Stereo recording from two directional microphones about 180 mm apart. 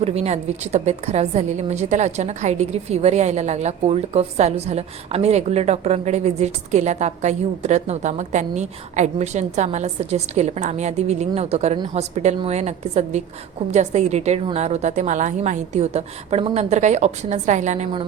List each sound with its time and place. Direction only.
0.0 s a woman's voice: 35° right (ahead or behind)